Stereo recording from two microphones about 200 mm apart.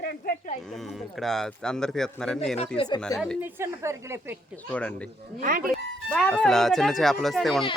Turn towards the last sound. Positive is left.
turn(degrees=0)  # may be behind; listen again after turning